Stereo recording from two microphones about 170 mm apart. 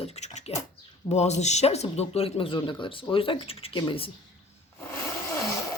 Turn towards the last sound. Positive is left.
turn(degrees=20)  # may be behind; listen again after turning